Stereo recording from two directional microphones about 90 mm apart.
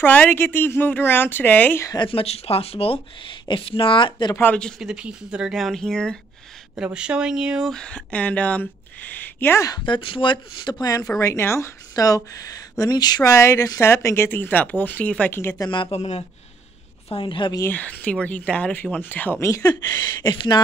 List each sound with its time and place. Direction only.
0.0 s speech: 20° left (ahead or behind)
2.0 s speech: 90° left
3.4 s speech: 75° left (ahead or behind)
4.7 s speech: 10° right (ahead or behind); by 6.1 s 5° left (ahead or behind)
6.8 s speech: 10° right (ahead or behind)
7.7 s speech: 10° left (ahead or behind)
9.8 s speech: 70° left (ahead or behind)
11.1 s speech: 30° left (ahead or behind); by 13.3 s 50° left (ahead or behind)
13.3 s speech: 30° left (ahead or behind)
15.7 s speech: 65° left (ahead or behind)
17.6 s speech: 20° left (ahead or behind)
19.4 s speech: 35° left (ahead or behind)
20.2 s speech: 55° left (ahead or behind)